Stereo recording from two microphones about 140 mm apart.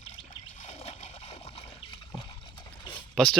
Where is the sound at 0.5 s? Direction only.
50° left (ahead or behind).